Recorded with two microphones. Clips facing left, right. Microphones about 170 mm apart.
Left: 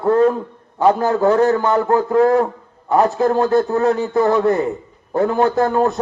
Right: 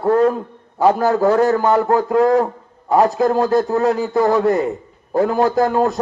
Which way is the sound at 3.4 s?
35° right (ahead or behind).